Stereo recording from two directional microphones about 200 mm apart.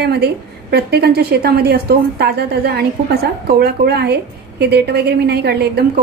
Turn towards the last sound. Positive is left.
turn(degrees=-55)  # may be behind; listen again after turning